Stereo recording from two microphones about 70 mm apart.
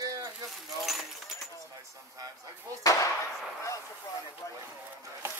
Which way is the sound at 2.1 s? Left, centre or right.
Right.